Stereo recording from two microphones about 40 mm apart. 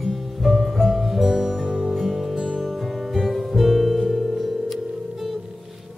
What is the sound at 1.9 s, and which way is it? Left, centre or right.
Music, centre.